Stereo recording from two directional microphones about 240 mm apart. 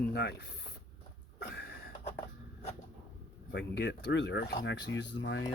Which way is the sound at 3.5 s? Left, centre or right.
Left.